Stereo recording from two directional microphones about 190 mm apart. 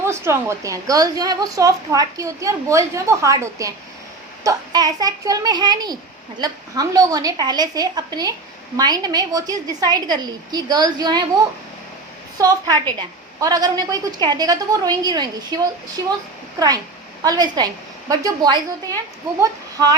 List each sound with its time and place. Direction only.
0.1 s a woman's voice: 15° right (ahead or behind)
12.4 s a woman's voice: 20° right (ahead or behind)